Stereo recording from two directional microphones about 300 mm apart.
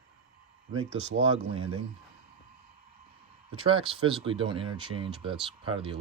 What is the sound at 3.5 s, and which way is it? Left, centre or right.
Speech, centre.